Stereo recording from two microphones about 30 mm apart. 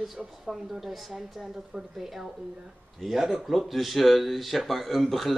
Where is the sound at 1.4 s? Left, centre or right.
Centre.